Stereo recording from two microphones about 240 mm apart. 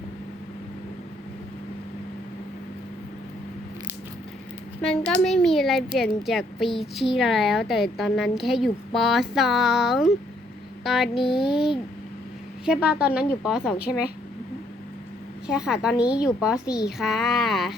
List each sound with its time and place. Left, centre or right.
4.8 s a woman's voice: centre
13.7 s a woman's voice: left
15.4 s a woman's voice: centre